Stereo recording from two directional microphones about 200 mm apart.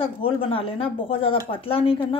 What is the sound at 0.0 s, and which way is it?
Speech, 25° left (ahead or behind).